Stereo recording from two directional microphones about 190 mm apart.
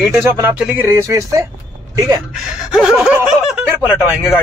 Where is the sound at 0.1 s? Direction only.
10° right (ahead or behind).